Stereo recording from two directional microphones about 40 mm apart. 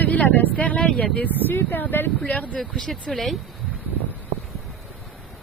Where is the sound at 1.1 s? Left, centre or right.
Left.